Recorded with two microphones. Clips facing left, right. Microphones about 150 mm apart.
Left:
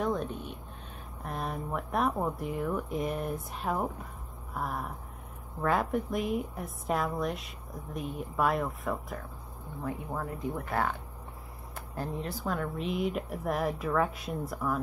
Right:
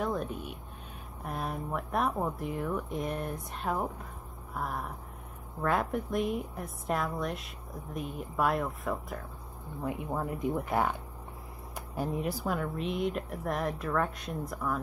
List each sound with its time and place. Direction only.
0.0 s a sound: centre (ahead or behind)
1.2 s a woman's voice: centre (ahead or behind)
10.1 s speech: 15° right (ahead or behind)
12.5 s a woman's voice: centre (ahead or behind)